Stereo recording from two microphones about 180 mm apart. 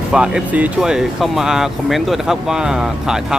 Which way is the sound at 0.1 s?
5° right (ahead or behind).